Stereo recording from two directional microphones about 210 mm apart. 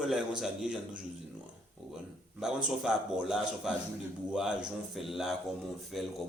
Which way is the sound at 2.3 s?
Centre (ahead or behind).